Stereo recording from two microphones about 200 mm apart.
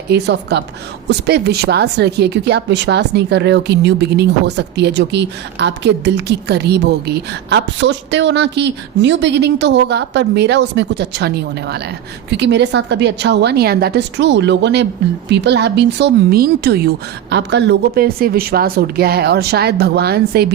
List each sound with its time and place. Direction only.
0.1 s a woman's voice: 55° right (ahead or behind)